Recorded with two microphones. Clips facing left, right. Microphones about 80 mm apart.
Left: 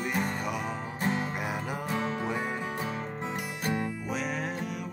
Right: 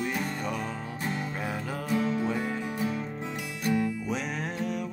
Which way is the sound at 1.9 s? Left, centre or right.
Left.